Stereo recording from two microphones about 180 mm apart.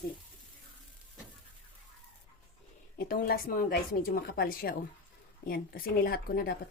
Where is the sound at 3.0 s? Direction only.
55° left (ahead or behind).